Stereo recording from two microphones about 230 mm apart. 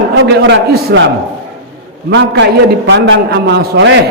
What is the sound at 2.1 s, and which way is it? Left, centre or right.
A man's voice, right.